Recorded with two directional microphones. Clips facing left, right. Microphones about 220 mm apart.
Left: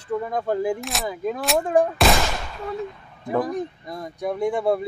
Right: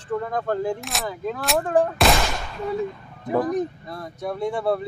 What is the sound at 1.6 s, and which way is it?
Speech, 15° left (ahead or behind).